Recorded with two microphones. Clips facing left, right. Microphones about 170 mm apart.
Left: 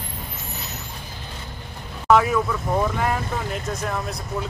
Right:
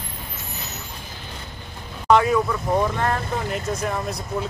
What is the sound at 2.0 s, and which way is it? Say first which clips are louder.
Speech: right 1 dB; centre (ahead or behind).